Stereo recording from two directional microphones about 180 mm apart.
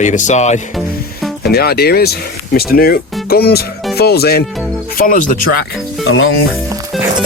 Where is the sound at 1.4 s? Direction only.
60° left (ahead or behind).